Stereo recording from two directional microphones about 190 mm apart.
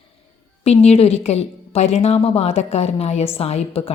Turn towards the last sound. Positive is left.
turn(degrees=30)  # may be behind; listen again after turning